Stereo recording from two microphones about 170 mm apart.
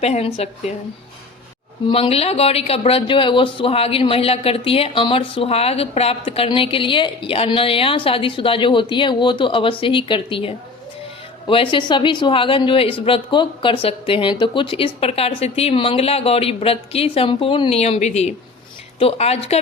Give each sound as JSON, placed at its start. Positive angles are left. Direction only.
{"t": 0.0, "sound": "speech", "side_deg": 35}
{"t": 1.9, "sound": "a woman's voice", "side_deg": 35}